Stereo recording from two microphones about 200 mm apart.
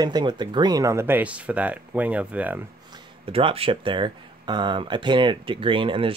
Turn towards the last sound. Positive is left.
turn(degrees=-25)  # may be behind; listen again after turning